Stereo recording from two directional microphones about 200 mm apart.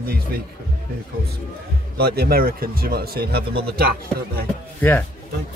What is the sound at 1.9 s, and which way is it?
Speech, 50° right (ahead or behind).